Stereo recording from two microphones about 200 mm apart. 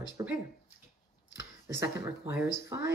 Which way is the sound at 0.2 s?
15° right (ahead or behind).